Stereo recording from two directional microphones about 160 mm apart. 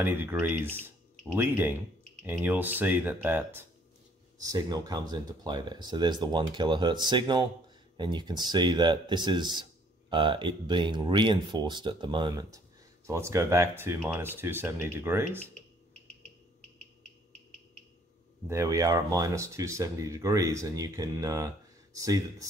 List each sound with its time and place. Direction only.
0.0 s speech: 15° right (ahead or behind)
4.4 s speech: 25° right (ahead or behind)
18.5 s speech: 20° right (ahead or behind)